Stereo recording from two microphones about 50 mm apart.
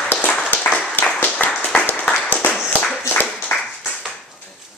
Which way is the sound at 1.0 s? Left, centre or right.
Left.